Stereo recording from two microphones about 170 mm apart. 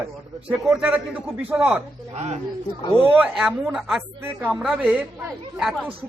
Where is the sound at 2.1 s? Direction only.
40° right (ahead or behind).